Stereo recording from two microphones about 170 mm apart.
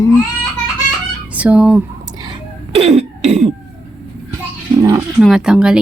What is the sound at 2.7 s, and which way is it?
Cough, 40° right (ahead or behind).